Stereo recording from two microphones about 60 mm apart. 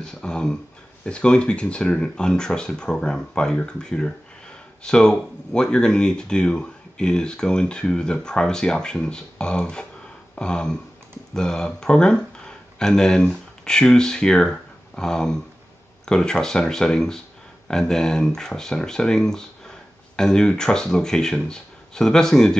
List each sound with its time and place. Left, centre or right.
0.0 s speech: centre
10.3 s a sound: centre
11.3 s speech: centre